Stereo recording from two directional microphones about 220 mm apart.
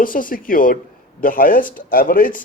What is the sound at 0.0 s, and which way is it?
Speech, 40° left (ahead or behind).